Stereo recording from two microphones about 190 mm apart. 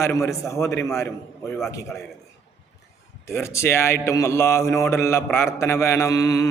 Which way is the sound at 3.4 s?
15° left (ahead or behind).